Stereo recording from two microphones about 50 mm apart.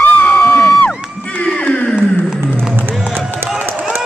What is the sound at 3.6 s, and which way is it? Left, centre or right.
Run, right.